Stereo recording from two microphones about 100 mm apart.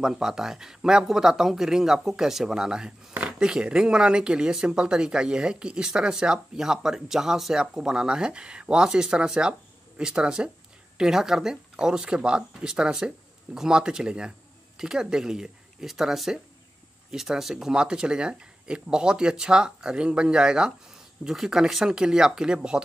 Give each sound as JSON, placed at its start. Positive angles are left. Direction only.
{"t": 0.0, "sound": "speech", "side_deg": -5}